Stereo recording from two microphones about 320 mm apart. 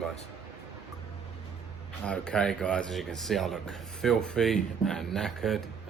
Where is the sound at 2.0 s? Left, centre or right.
Centre.